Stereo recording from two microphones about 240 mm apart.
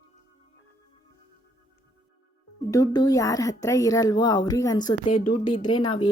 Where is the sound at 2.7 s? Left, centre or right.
Centre.